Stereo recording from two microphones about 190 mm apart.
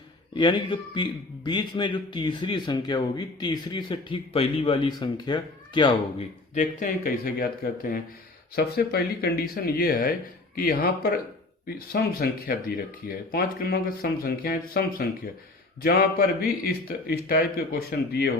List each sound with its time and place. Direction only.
0.3 s speech: 25° left (ahead or behind)
6.5 s speech: 40° left (ahead or behind)